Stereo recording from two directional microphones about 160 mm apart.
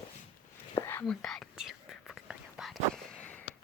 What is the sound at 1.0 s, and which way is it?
Whispering, 5° left (ahead or behind).